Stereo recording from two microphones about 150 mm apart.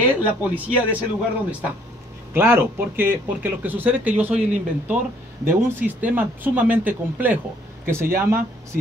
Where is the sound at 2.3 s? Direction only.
15° right (ahead or behind).